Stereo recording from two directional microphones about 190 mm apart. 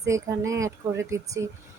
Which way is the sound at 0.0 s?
15° right (ahead or behind).